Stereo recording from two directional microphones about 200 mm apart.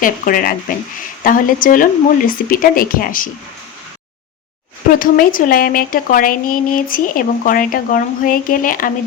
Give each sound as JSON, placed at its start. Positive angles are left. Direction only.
{"t": 0.0, "sound": "speech", "side_deg": 45}
{"t": 4.9, "sound": "speech", "side_deg": 45}